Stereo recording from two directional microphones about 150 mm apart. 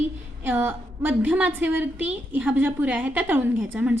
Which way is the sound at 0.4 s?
15° right (ahead or behind).